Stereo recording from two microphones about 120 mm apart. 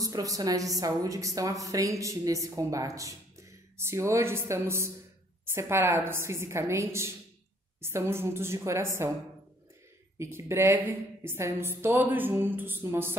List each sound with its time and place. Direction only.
0.0 s a woman's voice: 30° right (ahead or behind)
10.1 s a woman's voice: 20° right (ahead or behind)